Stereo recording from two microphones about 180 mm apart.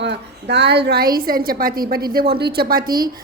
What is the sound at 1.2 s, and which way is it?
A woman's voice, 55° right (ahead or behind).